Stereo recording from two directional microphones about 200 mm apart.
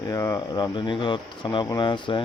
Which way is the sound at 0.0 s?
20° left (ahead or behind).